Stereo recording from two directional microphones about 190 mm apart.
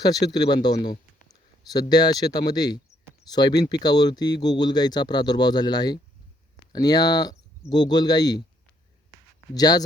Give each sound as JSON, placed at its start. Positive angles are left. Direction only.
{"t": 0.0, "sound": "speech", "side_deg": 20}
{"t": 9.6, "sound": "speech", "side_deg": 20}